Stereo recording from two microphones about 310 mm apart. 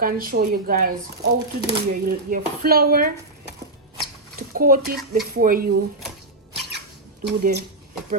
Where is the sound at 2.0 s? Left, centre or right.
Right.